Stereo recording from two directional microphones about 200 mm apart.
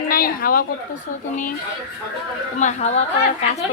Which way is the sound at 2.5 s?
35° left (ahead or behind).